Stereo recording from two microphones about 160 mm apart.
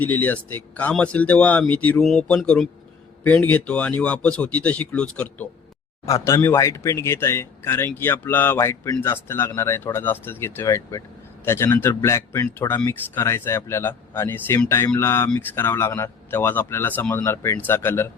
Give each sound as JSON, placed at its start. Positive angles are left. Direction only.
{"t": 0.0, "sound": "speech", "side_deg": 10}
{"t": 6.1, "sound": "speech", "side_deg": 20}